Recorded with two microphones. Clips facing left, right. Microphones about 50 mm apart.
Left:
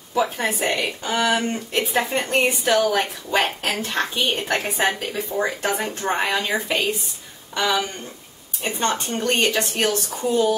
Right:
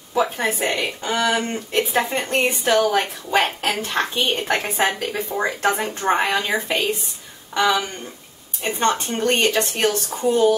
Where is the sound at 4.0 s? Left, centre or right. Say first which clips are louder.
Right 1 dB; centre.